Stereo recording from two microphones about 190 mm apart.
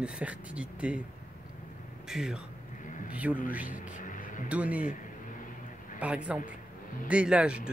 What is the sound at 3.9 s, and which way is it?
Music, 45° left (ahead or behind).